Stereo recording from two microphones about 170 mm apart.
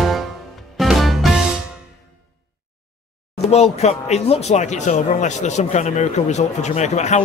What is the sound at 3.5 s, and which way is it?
Speech, 40° left (ahead or behind).